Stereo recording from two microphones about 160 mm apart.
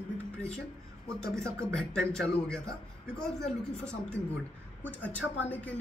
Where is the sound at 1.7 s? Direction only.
5° left (ahead or behind).